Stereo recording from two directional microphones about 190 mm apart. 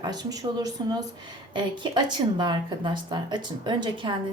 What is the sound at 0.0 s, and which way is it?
Speech, 20° right (ahead or behind).